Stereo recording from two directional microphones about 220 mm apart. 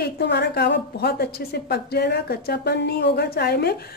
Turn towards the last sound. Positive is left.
turn(degrees=45)  # may be behind; listen again after turning